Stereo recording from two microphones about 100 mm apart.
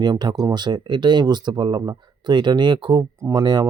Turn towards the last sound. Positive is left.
turn(degrees=-45)  # may be behind; listen again after turning